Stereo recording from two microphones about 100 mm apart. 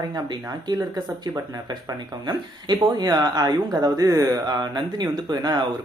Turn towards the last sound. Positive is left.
turn(degrees=-45)  # may be behind; listen again after turning